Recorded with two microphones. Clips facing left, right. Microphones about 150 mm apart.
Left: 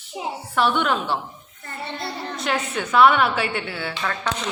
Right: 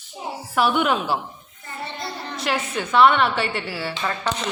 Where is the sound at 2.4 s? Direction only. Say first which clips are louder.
Even; centre (ahead or behind).